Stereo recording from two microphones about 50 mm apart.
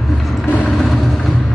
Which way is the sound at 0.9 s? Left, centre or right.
Centre.